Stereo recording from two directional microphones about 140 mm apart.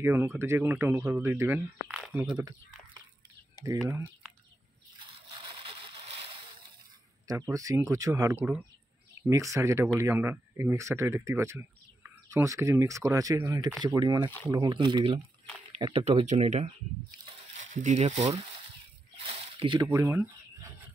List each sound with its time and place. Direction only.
0.0 s speech: 15° right (ahead or behind)
5.8 s splash: 40° right (ahead or behind)
7.2 s speech: 25° right (ahead or behind); by 16.7 s 50° right (ahead or behind)
17.7 s speech: 55° right (ahead or behind)
19.2 s a sound: 40° right (ahead or behind)
19.9 s chicken: 20° right (ahead or behind)